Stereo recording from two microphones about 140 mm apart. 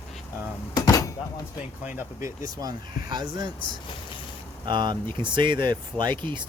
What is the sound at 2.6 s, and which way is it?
Speech, 30° right (ahead or behind).